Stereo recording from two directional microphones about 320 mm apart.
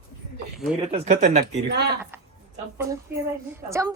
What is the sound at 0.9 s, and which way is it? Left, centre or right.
Speech, right.